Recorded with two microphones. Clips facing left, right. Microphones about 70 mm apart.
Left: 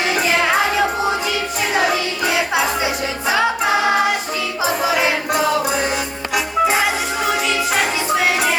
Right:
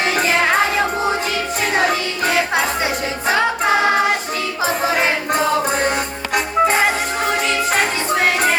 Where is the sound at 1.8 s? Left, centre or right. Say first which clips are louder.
Even; right.